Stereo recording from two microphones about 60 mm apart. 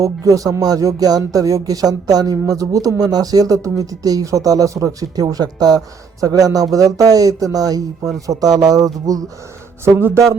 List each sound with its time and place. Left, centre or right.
0.0 s speech: right
9.8 s speech: right